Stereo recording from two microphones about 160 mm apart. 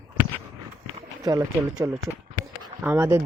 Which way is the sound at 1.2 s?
25° right (ahead or behind).